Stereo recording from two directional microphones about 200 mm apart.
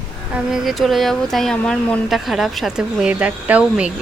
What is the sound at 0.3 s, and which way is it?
Speech, centre (ahead or behind).